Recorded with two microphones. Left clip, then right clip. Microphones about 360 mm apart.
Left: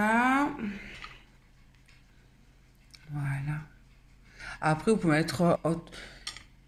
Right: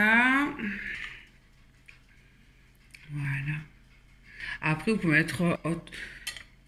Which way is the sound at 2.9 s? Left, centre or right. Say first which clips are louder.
Right 3 dB; left.